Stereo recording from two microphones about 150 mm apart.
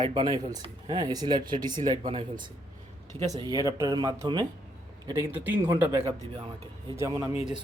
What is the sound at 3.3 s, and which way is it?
Speech, 25° right (ahead or behind).